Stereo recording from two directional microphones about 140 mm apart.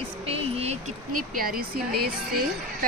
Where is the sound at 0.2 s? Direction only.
45° right (ahead or behind).